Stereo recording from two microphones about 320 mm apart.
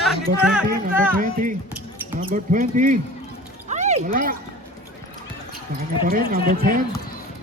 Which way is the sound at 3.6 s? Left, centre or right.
Right.